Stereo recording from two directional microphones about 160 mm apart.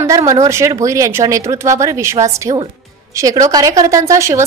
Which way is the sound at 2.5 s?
35° right (ahead or behind).